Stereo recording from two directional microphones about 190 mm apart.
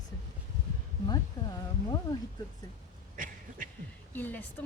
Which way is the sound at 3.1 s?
45° right (ahead or behind).